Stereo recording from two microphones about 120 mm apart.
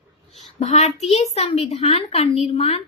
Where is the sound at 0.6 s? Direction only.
70° left (ahead or behind).